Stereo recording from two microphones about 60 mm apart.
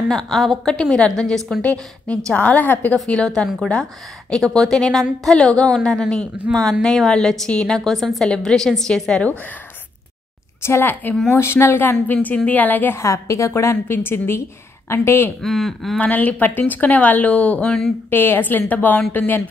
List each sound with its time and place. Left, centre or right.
0.1 s a woman's voice: centre
1.6 s speech: left
4.3 s a woman's voice: centre
10.6 s a woman's voice: left
12.9 s a woman's voice: left
15.4 s a woman's voice: centre
16.0 s speech: left
18.1 s a woman's voice: left